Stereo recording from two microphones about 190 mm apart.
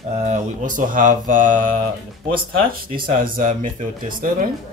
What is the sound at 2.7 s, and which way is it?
Speech, 50° right (ahead or behind).